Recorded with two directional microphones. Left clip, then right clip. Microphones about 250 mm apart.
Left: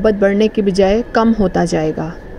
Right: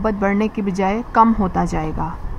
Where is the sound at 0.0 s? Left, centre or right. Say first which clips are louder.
Left 7 dB; centre.